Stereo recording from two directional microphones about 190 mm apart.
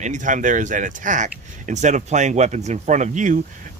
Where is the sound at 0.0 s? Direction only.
40° right (ahead or behind).